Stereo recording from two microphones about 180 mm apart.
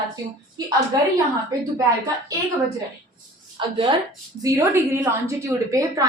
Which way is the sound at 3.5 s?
25° right (ahead or behind).